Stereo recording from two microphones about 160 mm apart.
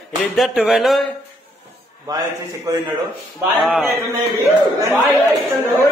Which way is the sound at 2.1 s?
25° right (ahead or behind).